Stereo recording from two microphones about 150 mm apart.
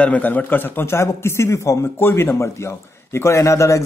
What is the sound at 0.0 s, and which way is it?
A man's voice, 10° left (ahead or behind).